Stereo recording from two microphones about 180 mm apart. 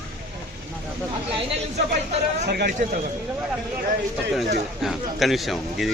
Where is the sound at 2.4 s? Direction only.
60° right (ahead or behind).